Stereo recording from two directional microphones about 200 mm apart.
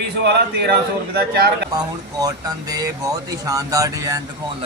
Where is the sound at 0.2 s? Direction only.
55° right (ahead or behind).